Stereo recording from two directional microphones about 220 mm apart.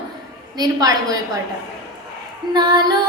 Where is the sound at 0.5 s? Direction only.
15° right (ahead or behind).